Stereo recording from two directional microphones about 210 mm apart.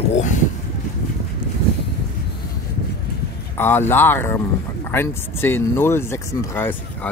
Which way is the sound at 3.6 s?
10° left (ahead or behind).